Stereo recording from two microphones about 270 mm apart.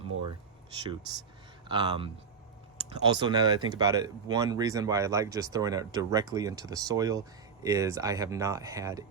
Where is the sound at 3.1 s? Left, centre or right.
Centre.